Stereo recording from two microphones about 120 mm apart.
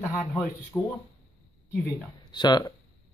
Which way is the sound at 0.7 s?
20° left (ahead or behind).